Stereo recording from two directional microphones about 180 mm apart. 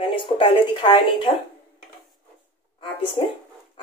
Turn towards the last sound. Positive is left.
turn(degrees=30)  # may be behind; listen again after turning